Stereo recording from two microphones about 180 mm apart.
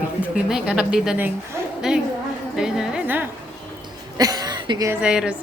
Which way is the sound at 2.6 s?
5° right (ahead or behind).